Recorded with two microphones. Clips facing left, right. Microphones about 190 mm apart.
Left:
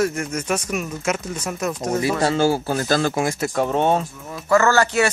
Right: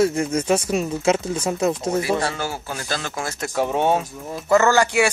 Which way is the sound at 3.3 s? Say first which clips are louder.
Left 2 dB; centre (ahead or behind).